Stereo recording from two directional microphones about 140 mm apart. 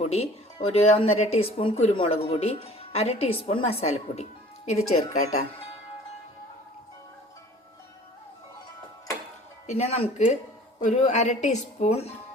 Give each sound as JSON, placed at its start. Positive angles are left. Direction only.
{"t": 0.0, "sound": "speech", "side_deg": 45}
{"t": 9.6, "sound": "speech", "side_deg": 50}